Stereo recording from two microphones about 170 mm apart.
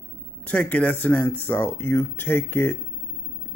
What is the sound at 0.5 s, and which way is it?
Speech, 10° left (ahead or behind).